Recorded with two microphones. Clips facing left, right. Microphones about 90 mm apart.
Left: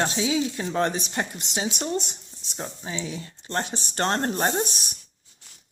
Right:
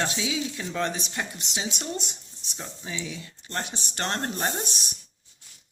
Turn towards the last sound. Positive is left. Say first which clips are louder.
# left 5 dB
turn(degrees=35)  # may be behind; listen again after turning